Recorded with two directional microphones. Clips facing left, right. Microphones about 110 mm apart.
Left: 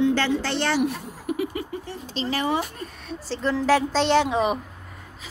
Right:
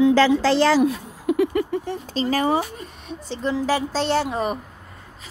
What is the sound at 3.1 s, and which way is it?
A woman's voice, 15° right (ahead or behind).